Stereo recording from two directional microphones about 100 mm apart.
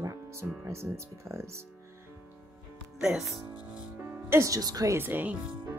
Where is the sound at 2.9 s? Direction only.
5° right (ahead or behind).